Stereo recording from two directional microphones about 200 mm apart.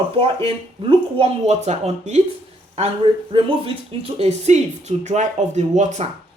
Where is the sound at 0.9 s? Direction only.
30° right (ahead or behind).